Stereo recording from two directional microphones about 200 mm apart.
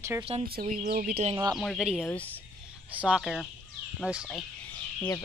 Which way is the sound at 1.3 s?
20° right (ahead or behind).